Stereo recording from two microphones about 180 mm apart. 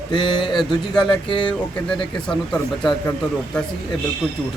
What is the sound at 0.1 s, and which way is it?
Speech, 25° left (ahead or behind).